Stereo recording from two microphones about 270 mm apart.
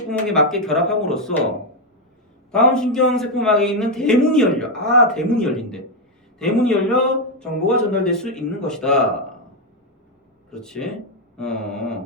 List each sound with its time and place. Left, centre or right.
0.1 s speech: centre
2.5 s speech: centre
10.5 s speech: centre